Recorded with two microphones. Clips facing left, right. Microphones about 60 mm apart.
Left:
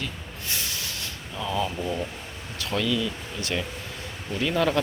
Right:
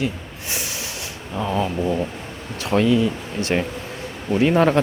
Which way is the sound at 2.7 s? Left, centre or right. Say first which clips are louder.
Right 9 dB; right.